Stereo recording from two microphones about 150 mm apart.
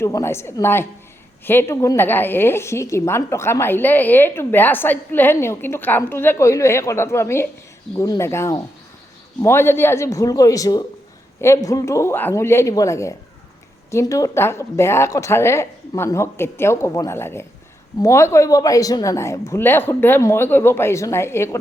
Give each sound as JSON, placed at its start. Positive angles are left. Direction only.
{"t": 0.0, "sound": "a woman's voice", "side_deg": 20}